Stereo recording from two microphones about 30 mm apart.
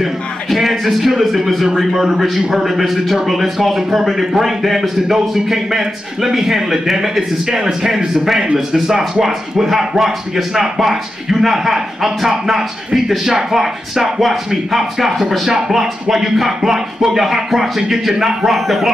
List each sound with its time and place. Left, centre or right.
0.0 s a man's voice: centre